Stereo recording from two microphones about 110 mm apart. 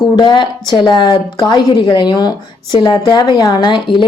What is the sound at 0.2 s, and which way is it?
Speech, 45° left (ahead or behind).